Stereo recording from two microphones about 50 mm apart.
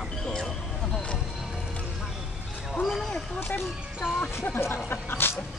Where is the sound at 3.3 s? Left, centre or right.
Left.